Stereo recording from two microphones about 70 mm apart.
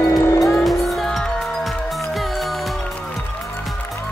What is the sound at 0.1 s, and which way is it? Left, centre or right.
Music, left.